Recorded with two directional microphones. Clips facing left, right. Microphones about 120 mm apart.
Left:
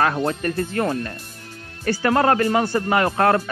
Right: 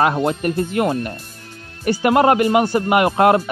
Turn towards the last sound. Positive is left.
turn(degrees=-20)  # may be behind; listen again after turning